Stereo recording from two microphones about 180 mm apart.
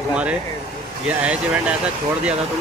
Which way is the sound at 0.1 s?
5° right (ahead or behind).